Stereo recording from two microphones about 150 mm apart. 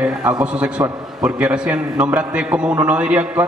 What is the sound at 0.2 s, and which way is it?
A man's voice, 10° right (ahead or behind).